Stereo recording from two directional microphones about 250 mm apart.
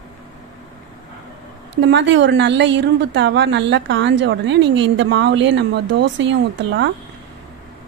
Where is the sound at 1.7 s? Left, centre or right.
Right.